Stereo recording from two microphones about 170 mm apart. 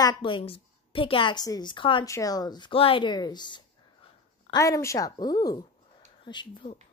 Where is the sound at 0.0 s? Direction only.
30° left (ahead or behind).